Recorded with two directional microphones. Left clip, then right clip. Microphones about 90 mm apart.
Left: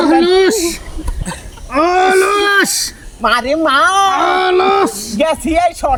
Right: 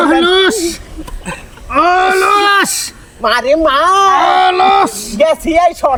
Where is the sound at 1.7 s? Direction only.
20° left (ahead or behind).